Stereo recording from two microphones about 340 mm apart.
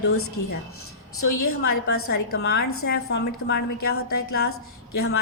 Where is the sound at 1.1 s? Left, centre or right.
Left.